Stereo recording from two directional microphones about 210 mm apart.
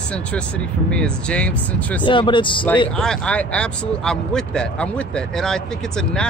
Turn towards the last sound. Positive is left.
turn(degrees=5)  # may be behind; listen again after turning